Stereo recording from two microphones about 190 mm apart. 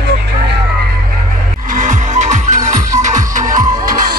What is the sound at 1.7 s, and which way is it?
Music, 40° right (ahead or behind).